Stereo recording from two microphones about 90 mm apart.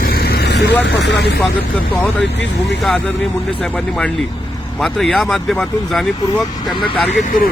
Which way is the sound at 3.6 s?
10° left (ahead or behind).